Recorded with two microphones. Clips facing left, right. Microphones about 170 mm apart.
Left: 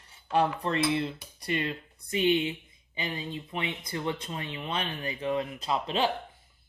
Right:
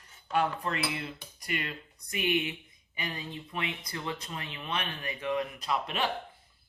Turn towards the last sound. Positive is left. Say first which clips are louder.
# left 3 dB
turn(degrees=30)  # may be behind; listen again after turning